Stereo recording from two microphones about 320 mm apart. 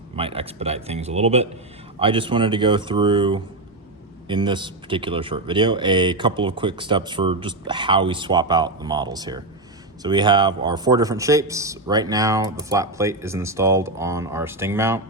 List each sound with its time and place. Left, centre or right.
0.2 s speech: centre